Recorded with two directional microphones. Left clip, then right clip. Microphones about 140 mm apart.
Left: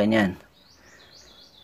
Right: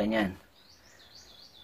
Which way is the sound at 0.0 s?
50° left (ahead or behind).